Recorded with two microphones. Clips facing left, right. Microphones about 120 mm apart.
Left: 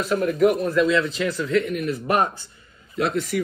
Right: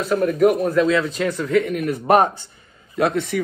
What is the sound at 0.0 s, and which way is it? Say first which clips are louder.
A woman's voice: right 2 dB; 45° right (ahead or behind).